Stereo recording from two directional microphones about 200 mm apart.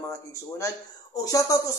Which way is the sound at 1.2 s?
15° left (ahead or behind).